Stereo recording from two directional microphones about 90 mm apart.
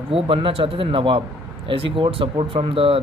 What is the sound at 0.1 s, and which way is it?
Speech, 85° right.